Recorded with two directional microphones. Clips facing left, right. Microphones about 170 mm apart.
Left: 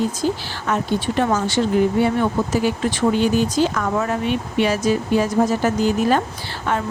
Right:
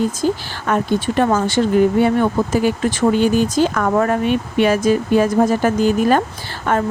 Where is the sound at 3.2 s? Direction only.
50° right (ahead or behind).